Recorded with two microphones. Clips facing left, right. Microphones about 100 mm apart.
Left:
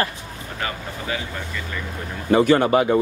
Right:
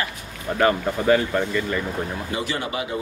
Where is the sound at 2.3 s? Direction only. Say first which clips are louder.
Left 14 dB; 50° left (ahead or behind).